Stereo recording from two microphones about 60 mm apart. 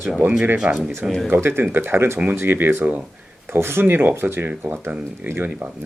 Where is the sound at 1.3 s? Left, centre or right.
Right.